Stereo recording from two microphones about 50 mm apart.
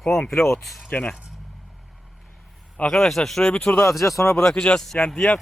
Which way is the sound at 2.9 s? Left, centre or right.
Centre.